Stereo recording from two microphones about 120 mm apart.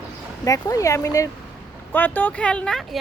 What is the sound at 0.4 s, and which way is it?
Speech, 30° left (ahead or behind).